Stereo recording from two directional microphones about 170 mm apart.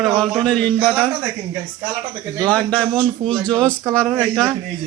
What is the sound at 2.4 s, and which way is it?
Speech, 10° left (ahead or behind).